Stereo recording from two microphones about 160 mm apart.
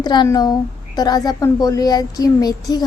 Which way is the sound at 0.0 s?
25° left (ahead or behind).